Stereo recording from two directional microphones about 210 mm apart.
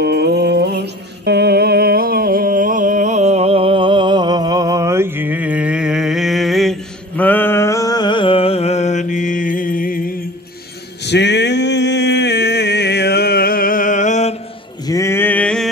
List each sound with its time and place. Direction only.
0.0 s music: 50° right (ahead or behind); by 10.1 s 40° left (ahead or behind)
11.1 s a sound: 55° left (ahead or behind); by 14.3 s 35° left (ahead or behind)
14.9 s male singing: 15° left (ahead or behind)